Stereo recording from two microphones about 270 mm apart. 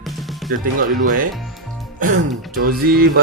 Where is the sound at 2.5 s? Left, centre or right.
Right.